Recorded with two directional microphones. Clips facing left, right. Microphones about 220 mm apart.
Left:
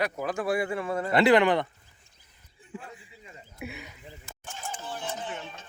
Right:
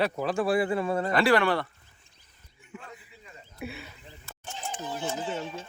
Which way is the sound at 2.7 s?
30° left (ahead or behind).